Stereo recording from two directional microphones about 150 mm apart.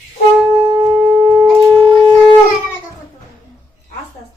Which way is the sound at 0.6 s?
30° right (ahead or behind).